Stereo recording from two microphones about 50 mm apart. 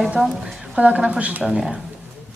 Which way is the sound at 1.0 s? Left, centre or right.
Right.